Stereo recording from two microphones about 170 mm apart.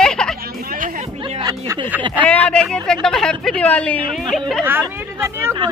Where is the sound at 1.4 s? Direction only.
25° right (ahead or behind).